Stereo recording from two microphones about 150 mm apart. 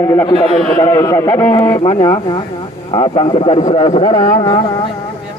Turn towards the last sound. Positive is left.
turn(degrees=35)  # may be behind; listen again after turning